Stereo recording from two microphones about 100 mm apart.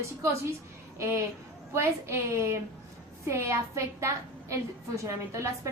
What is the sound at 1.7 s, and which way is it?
A woman's voice, 25° right (ahead or behind).